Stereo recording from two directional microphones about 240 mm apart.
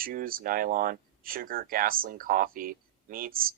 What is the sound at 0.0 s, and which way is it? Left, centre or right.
Speech, right.